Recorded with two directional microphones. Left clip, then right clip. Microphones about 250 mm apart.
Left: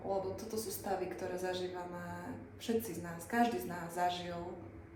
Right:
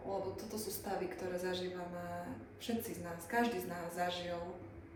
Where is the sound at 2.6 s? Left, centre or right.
Centre.